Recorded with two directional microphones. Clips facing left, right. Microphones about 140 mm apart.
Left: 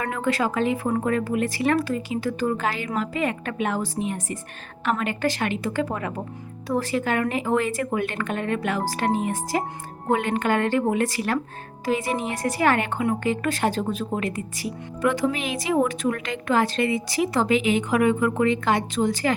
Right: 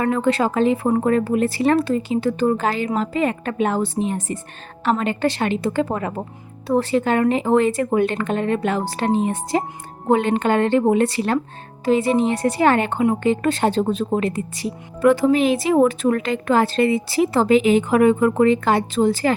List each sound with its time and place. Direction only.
0.0 s a woman's voice: 30° right (ahead or behind)